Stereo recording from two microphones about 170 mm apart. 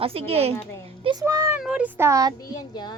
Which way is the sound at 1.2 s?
15° right (ahead or behind).